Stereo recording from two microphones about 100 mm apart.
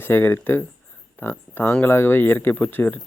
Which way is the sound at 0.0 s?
25° left (ahead or behind).